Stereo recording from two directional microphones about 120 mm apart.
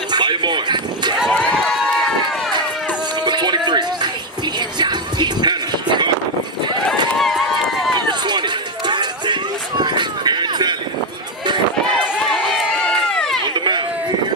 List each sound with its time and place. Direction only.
0.1 s a sound: 40° right (ahead or behind)
1.3 s run: 5° left (ahead or behind)
3.2 s music: 40° right (ahead or behind)
7.2 s run: centre (ahead or behind)
8.1 s run: 40° right (ahead or behind)
12.3 s run: 5° left (ahead or behind)
13.5 s a sound: 40° right (ahead or behind)